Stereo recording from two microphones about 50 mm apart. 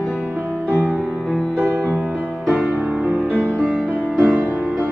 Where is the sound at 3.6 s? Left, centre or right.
Right.